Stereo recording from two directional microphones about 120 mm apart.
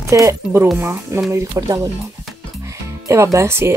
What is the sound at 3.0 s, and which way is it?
Speech, 25° right (ahead or behind).